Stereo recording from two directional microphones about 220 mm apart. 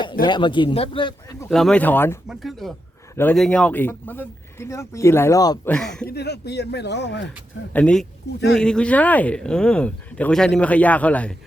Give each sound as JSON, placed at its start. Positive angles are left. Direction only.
{"t": 0.3, "sound": "speech", "side_deg": 20}
{"t": 1.5, "sound": "speech", "side_deg": 0}
{"t": 5.7, "sound": "speech", "side_deg": 5}
{"t": 6.1, "sound": "speech", "side_deg": 50}
{"t": 7.7, "sound": "speech", "side_deg": 5}